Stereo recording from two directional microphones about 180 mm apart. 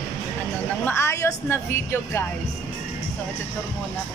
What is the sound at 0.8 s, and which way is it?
A woman's voice, 15° left (ahead or behind).